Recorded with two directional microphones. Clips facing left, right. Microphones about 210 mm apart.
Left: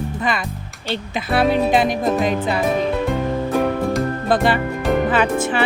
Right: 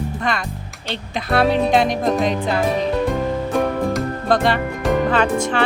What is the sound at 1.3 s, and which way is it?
Music, 5° left (ahead or behind).